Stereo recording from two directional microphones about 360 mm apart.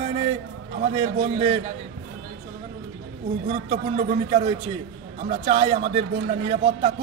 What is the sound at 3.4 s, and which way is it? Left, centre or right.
A man's voice, centre.